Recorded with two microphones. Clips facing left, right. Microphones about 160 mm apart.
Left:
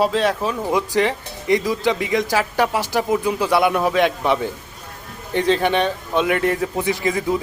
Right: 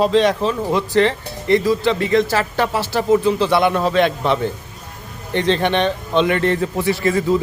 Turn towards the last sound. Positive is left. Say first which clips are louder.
# right 3 dB
turn(degrees=15)  # may be behind; listen again after turning